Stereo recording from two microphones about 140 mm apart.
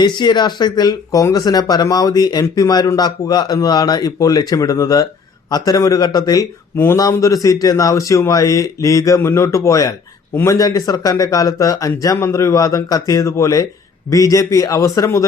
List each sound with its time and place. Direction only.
0.0 s speech: 30° left (ahead or behind)